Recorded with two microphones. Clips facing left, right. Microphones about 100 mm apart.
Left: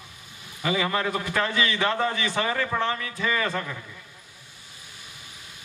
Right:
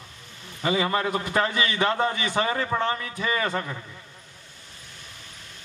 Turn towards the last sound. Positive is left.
turn(degrees=-30)  # may be behind; listen again after turning